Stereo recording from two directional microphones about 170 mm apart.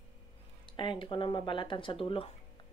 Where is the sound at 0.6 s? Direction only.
30° left (ahead or behind).